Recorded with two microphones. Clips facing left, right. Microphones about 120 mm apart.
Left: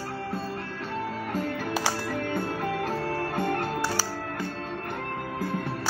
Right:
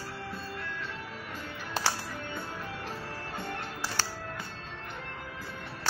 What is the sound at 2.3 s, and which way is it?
Music, 55° left (ahead or behind).